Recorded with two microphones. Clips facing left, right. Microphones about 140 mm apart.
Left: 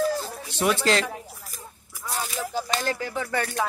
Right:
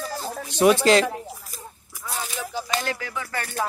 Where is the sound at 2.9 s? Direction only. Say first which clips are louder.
Left 2 dB; 35° left (ahead or behind).